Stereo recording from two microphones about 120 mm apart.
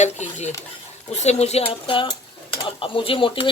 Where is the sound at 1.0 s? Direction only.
65° left (ahead or behind).